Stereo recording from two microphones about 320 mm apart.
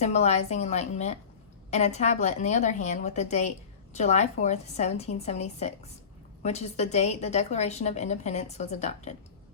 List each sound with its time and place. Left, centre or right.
0.0 s a woman's voice: left